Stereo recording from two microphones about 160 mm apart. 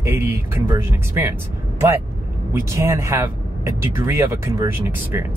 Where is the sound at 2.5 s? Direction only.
20° right (ahead or behind).